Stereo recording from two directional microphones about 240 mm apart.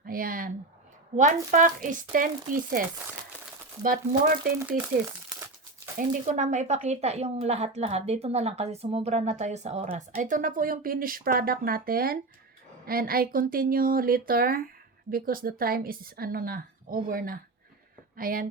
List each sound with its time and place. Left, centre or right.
0.0 s a sound: right
1.1 s a woman's voice: right
6.0 s a woman's voice: right